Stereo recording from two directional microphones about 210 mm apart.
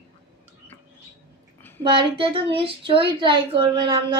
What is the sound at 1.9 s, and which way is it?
A woman's voice, 25° right (ahead or behind).